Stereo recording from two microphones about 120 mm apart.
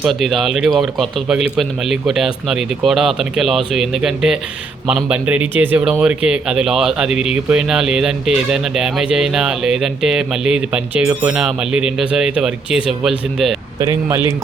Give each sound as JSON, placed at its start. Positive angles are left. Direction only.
{"t": 0.1, "sound": "speech", "side_deg": 0}
{"t": 13.7, "sound": "speech", "side_deg": -30}